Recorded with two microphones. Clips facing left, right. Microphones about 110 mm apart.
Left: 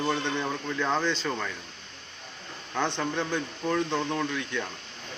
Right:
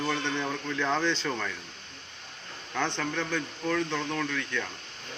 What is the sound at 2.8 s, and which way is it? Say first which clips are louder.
Speech: left 2 dB; 15° left (ahead or behind).